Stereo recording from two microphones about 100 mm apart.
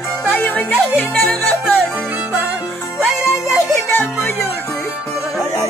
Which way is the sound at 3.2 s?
25° left (ahead or behind).